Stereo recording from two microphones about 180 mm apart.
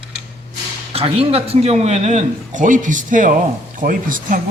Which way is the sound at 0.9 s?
30° right (ahead or behind).